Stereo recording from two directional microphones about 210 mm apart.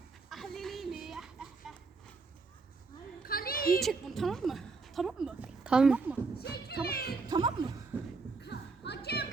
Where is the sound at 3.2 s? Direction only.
45° left (ahead or behind).